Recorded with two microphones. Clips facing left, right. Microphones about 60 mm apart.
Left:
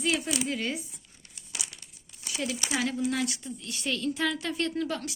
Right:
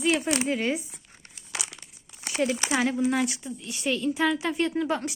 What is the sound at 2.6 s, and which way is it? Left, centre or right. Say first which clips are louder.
Speech: right 2 dB; right.